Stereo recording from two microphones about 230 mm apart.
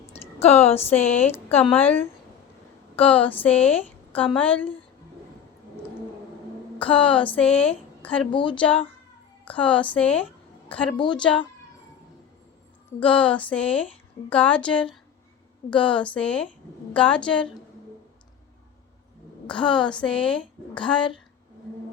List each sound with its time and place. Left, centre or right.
0.1 s a sound: left
0.9 s a woman's voice: centre
3.3 s a woman's voice: centre
6.7 s a woman's voice: centre
8.3 s speech: left
8.5 s a woman's voice: centre
10.9 s speech: centre
11.2 s a woman's voice: centre
13.0 s a woman's voice: centre
19.5 s a woman's voice: centre